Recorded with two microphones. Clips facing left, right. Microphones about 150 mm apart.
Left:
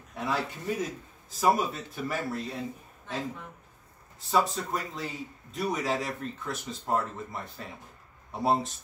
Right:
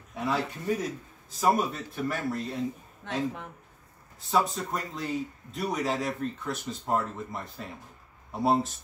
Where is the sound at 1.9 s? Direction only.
Centre (ahead or behind).